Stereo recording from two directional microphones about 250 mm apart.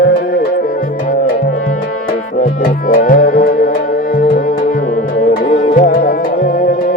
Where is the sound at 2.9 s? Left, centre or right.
Left.